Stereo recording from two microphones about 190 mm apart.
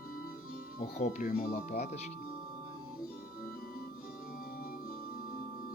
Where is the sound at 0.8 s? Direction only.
40° left (ahead or behind).